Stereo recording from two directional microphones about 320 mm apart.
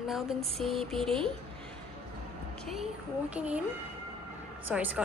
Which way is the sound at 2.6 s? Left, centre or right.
Centre.